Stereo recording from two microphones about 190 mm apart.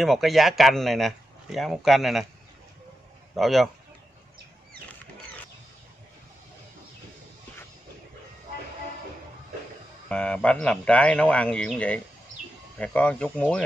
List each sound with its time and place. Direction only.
0.0 s speech: centre (ahead or behind)
3.3 s speech: centre (ahead or behind)
10.0 s speech: 5° left (ahead or behind)